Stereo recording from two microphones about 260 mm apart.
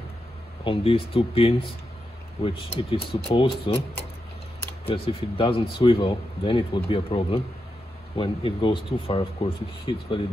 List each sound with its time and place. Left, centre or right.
0.7 s speech: left
4.8 s speech: left